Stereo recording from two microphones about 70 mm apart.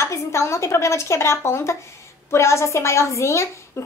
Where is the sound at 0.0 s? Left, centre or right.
Left.